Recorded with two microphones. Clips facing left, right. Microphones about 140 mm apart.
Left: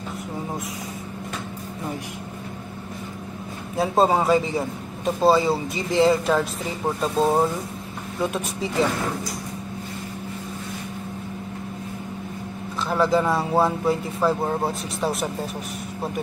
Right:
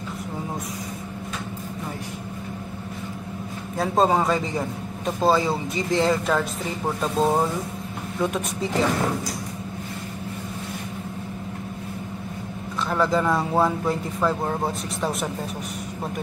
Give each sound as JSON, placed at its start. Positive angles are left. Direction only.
{"t": 3.7, "sound": "a man's voice", "side_deg": 0}
{"t": 12.8, "sound": "a man's voice", "side_deg": 0}